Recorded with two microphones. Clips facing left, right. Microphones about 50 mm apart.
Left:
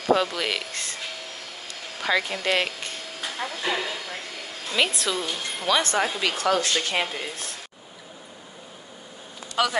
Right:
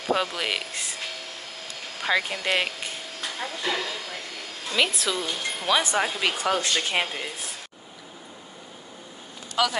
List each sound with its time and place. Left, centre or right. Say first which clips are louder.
0.1 s speech: left 3 dB; centre
2.0 s speech: left 1 dB; centre
3.2 s speech: left 2 dB; centre
6.2 s speech: left 1 dB; centre
7.1 s speech: left 1 dB; centre